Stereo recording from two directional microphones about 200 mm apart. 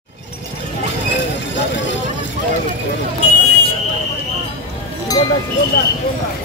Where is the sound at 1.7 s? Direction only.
65° left (ahead or behind).